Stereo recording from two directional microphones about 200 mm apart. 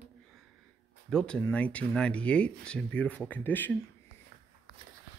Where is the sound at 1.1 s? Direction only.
5° left (ahead or behind).